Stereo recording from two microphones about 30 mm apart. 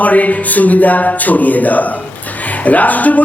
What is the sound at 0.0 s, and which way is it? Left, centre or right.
Speech, left.